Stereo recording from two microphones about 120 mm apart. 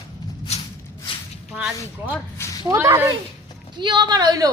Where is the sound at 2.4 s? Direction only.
20° left (ahead or behind).